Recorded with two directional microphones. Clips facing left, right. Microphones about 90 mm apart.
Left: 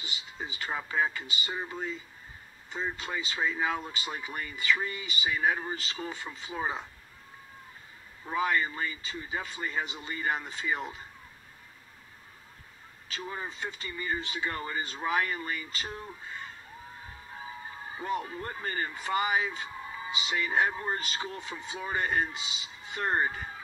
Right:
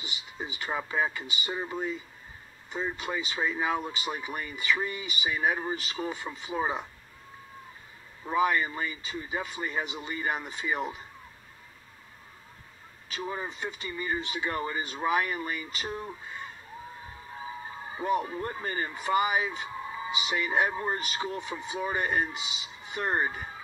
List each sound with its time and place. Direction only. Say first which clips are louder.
0.4 s speech: right 2 dB; 20° right (ahead or behind)
8.3 s speech: right 3 dB; 20° right (ahead or behind)
13.2 s speech: right 3 dB; 20° right (ahead or behind)
17.8 s speech: right 5 dB; 20° right (ahead or behind)